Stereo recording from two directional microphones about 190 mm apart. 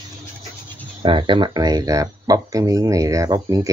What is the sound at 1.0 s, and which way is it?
Speech, 25° right (ahead or behind).